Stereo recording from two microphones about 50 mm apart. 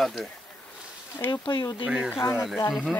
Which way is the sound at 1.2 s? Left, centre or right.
Left.